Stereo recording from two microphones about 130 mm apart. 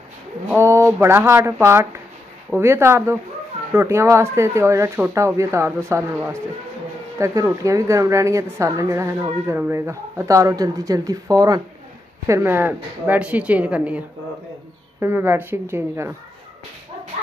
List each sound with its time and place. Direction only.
0.6 s speech: 20° right (ahead or behind)
12.3 s speech: 20° right (ahead or behind)